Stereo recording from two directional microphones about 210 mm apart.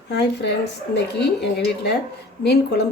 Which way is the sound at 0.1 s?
55° left (ahead or behind).